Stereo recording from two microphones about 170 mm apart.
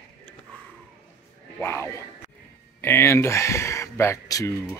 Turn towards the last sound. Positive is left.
turn(degrees=20)  # may be behind; listen again after turning